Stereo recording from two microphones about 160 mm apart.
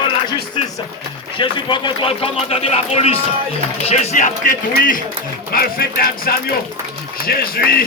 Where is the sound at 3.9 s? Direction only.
50° left (ahead or behind); by 7.8 s 70° left (ahead or behind).